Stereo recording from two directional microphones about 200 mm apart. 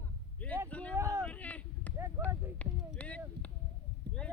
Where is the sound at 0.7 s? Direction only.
5° left (ahead or behind).